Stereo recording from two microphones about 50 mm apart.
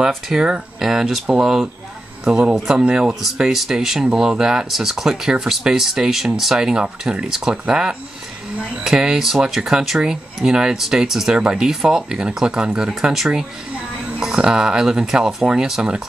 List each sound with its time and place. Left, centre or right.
0.3 s speech: centre
2.8 s speech: right
3.3 s speech: centre
4.0 s speech: centre